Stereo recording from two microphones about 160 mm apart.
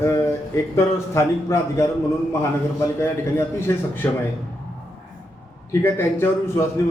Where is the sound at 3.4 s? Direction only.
15° left (ahead or behind).